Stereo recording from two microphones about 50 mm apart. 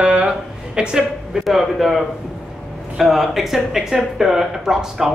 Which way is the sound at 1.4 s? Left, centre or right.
Centre.